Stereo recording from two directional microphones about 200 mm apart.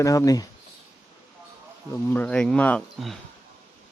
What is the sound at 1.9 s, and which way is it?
Speech, 10° left (ahead or behind).